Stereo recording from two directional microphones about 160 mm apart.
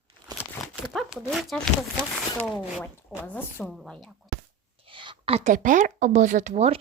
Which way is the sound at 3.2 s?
10° left (ahead or behind).